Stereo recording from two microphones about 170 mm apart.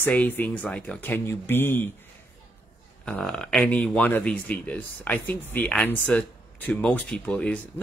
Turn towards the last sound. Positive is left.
turn(degrees=10)  # may be behind; listen again after turning